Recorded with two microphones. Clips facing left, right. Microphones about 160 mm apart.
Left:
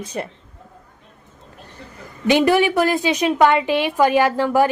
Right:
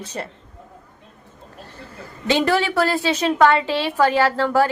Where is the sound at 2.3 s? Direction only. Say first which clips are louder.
Left 4 dB; 15° left (ahead or behind).